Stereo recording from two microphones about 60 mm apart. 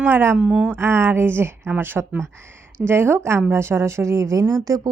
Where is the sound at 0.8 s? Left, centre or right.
Right.